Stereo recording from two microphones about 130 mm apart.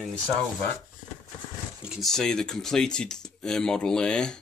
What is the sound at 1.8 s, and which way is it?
Speech, centre (ahead or behind).